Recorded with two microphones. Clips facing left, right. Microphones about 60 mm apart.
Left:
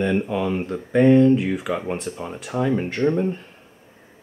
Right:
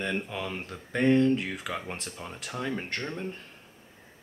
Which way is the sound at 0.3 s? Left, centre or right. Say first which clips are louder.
Left 12 dB; centre.